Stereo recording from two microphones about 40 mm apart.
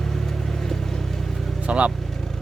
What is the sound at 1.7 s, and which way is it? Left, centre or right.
Vehicle, right.